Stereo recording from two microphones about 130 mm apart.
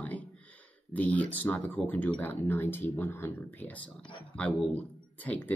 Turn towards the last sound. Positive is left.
turn(degrees=10)  # may be behind; listen again after turning